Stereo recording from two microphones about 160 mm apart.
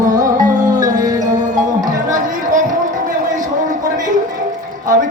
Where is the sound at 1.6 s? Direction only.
55° right (ahead or behind).